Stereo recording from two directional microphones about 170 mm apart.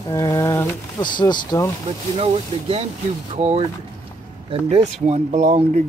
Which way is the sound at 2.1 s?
35° right (ahead or behind).